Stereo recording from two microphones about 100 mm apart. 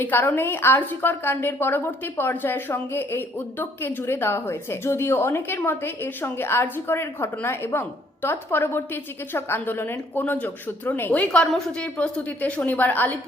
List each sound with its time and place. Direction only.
0.0 s a woman's voice: 20° left (ahead or behind)
11.3 s a woman's voice: 5° left (ahead or behind)